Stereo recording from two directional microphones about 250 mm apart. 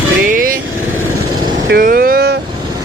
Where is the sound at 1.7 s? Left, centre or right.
Right.